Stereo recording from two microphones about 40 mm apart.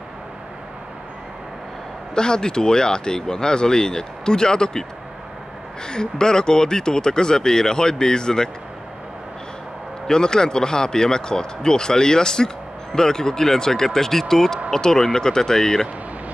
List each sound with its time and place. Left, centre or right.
2.1 s speech: centre
5.9 s speech: centre
10.0 s speech: centre